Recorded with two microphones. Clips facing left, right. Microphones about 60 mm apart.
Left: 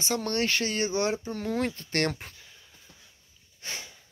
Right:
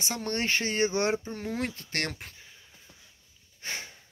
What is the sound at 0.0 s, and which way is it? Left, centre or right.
Speech, centre.